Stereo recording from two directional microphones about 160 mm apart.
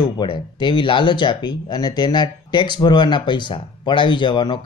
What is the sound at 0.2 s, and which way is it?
Speech, 30° left (ahead or behind).